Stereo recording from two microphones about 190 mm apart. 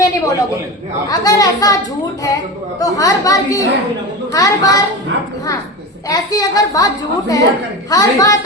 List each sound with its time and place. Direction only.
0.0 s a sound: 15° left (ahead or behind)
1.0 s speech: 20° left (ahead or behind)
6.1 s speech: 20° left (ahead or behind)